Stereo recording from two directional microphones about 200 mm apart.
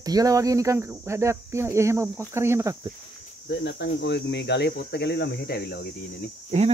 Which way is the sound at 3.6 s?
60° left (ahead or behind).